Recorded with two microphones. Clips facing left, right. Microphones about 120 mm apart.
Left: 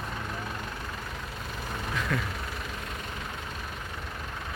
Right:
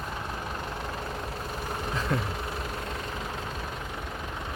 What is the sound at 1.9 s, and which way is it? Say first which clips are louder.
Vehicle: right 1 dB; 30° right (ahead or behind).